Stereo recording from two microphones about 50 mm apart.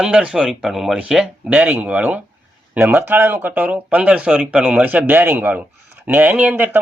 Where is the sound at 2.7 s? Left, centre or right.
Right.